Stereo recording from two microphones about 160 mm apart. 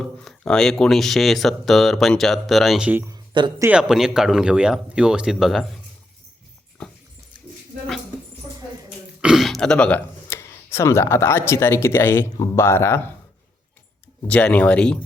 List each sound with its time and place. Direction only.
0.0 s speech: 5° left (ahead or behind)
3.1 s a sound: 30° right (ahead or behind)
3.6 s speech: 5° right (ahead or behind)
6.8 s dog: 5° left (ahead or behind)
9.2 s speech: centre (ahead or behind)
14.3 s speech: 10° left (ahead or behind)